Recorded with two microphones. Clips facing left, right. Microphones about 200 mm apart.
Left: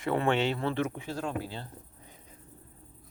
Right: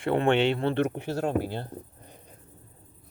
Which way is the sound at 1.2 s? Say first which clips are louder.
Right 8 dB; 45° right (ahead or behind).